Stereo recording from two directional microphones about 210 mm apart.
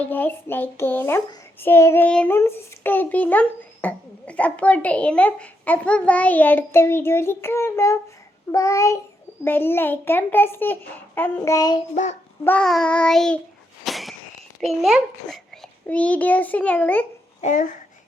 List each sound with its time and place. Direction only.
0.0 s a child's voice: 10° left (ahead or behind)
12.5 s child singing: 5° left (ahead or behind)
13.8 s a sound: centre (ahead or behind)
14.6 s child singing: centre (ahead or behind)
15.9 s a child's voice: 5° left (ahead or behind)
17.4 s speech: 40° left (ahead or behind)